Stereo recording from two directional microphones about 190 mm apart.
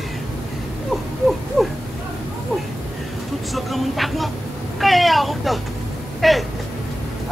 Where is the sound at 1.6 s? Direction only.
5° left (ahead or behind).